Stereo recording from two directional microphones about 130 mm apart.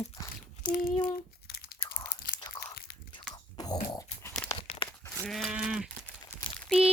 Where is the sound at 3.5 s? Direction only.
30° left (ahead or behind).